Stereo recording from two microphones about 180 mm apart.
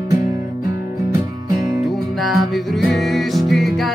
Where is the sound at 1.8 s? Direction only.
Centre (ahead or behind).